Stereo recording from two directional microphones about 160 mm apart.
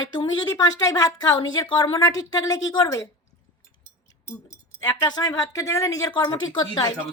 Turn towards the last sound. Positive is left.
turn(degrees=25)  # may be behind; listen again after turning